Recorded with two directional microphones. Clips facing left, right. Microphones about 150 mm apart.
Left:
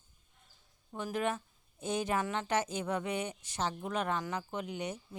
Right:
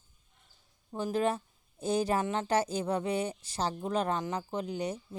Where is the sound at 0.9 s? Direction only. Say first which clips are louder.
Right 4 dB; 30° right (ahead or behind).